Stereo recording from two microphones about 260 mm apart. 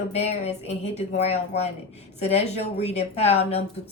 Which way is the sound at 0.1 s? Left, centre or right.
Left.